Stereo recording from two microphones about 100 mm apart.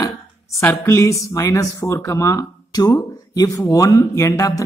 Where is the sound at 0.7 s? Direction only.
25° left (ahead or behind).